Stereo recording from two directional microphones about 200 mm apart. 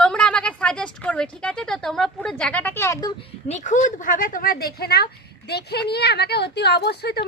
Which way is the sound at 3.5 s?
40° left (ahead or behind).